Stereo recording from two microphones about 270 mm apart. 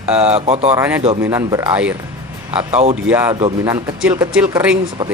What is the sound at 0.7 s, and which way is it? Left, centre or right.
Speech, centre.